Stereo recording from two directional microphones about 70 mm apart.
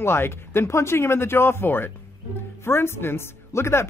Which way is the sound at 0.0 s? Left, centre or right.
Left.